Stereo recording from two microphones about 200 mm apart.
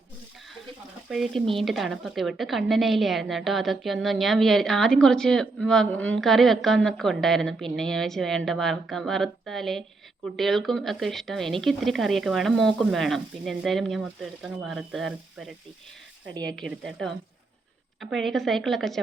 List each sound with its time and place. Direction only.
1.1 s a woman's voice: centre (ahead or behind)
16.3 s speech: 20° right (ahead or behind)
16.6 s a woman's voice: centre (ahead or behind)